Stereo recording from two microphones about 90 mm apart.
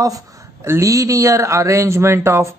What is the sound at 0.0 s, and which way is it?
Speech, 35° right (ahead or behind).